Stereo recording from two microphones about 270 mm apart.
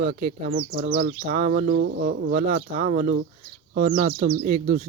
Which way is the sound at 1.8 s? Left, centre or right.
Right.